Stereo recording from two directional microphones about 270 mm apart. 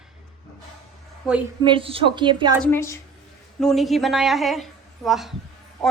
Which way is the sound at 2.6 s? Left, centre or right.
Centre.